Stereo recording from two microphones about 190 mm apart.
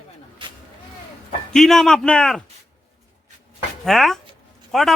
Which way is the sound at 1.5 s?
Centre (ahead or behind).